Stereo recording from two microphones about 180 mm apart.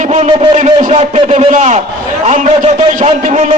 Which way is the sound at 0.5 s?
40° right (ahead or behind).